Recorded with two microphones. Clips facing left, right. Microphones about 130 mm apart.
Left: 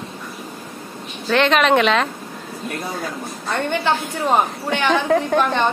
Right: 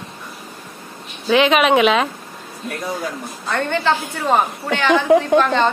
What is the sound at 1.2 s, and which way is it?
Speech, 5° right (ahead or behind).